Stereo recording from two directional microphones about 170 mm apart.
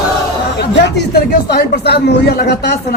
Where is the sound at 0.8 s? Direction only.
70° left (ahead or behind).